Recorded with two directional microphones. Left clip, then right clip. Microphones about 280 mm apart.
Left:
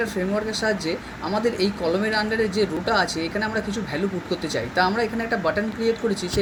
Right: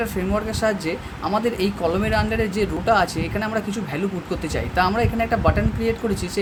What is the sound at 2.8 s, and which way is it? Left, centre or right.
Speech, centre.